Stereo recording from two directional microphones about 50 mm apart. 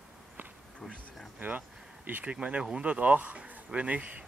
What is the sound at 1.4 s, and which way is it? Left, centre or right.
Speech, right.